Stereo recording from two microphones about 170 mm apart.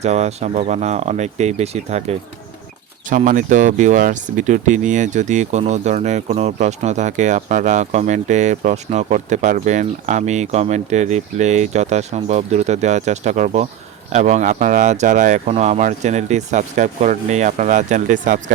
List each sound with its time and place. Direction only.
0.0 s speech: 40° right (ahead or behind)